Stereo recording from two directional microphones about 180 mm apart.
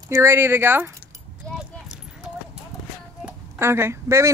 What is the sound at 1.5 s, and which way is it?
Clip-clop, 5° right (ahead or behind).